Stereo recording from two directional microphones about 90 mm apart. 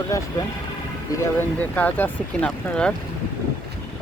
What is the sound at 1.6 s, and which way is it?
Speech, 15° left (ahead or behind).